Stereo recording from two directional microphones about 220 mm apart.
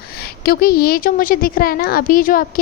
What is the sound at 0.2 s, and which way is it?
A woman's voice, 45° left (ahead or behind).